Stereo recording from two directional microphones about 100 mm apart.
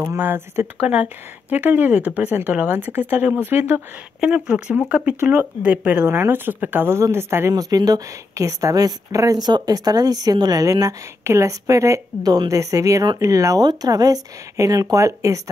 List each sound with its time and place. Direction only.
0.2 s speech: 20° right (ahead or behind)
4.2 s speech: 10° right (ahead or behind); by 7.5 s 25° right (ahead or behind)
7.5 s a woman's voice: 40° right (ahead or behind)